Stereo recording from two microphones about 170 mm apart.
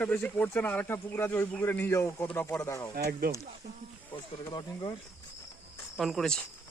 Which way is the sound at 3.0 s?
65° right (ahead or behind).